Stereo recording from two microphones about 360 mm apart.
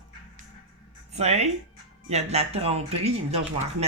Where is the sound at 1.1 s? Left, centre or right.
Centre.